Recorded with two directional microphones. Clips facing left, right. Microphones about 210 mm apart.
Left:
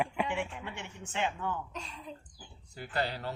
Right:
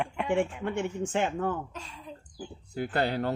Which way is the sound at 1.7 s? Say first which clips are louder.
Even; centre (ahead or behind).